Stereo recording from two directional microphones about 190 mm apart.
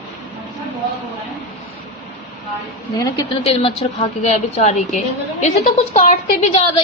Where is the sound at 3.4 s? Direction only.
30° left (ahead or behind).